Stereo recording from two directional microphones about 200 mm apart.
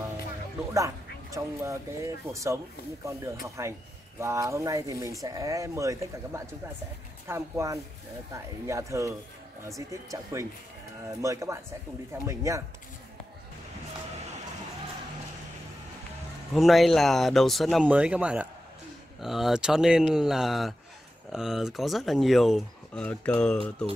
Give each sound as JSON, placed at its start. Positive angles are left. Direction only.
{"t": 0.7, "sound": "speech", "side_deg": -15}
{"t": 11.1, "sound": "speech", "side_deg": -15}
{"t": 16.5, "sound": "speech", "side_deg": 0}